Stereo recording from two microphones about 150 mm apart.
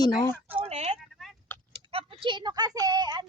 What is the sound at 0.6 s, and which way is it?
Speech, 45° right (ahead or behind).